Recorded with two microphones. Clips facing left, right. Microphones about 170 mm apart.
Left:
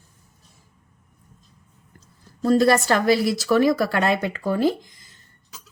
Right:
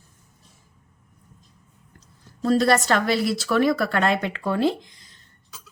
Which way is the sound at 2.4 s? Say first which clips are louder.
Left 2 dB; 5° left (ahead or behind).